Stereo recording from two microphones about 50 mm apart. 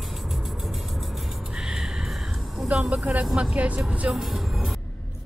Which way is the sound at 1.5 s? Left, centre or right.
Centre.